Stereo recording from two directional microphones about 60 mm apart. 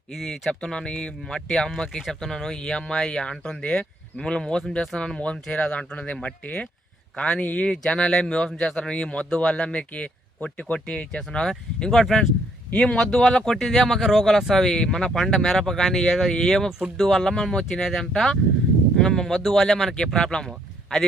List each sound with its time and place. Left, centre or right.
0.1 s speech: centre
7.4 s speech: left
7.7 s speech: centre